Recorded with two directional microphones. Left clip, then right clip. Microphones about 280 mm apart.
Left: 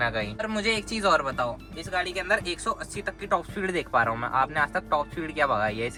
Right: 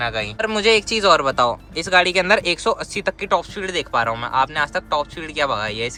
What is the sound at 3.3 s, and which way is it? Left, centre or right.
Speech, centre.